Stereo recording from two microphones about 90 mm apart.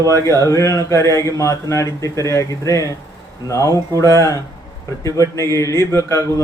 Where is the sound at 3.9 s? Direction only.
40° right (ahead or behind).